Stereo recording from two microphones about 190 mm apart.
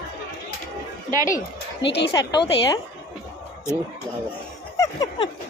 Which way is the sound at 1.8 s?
60° left (ahead or behind).